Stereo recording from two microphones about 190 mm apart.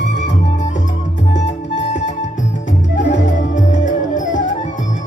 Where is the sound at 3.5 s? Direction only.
40° left (ahead or behind).